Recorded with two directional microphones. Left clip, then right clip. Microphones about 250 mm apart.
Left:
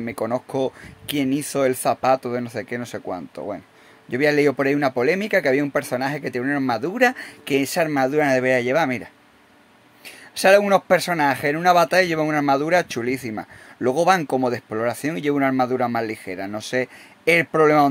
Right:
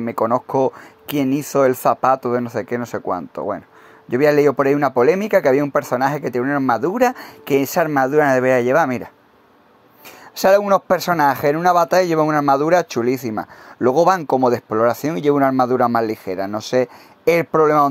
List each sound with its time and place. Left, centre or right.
0.0 s speech: centre
10.3 s speech: centre